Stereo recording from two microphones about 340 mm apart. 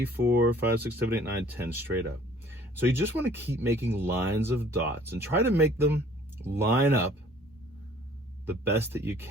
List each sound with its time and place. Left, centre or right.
0.0 s speech: centre
2.5 s a sound: centre
2.9 s speech: centre
8.7 s speech: centre